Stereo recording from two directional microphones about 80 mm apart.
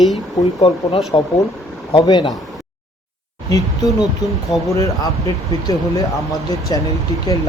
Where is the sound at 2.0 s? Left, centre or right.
Left.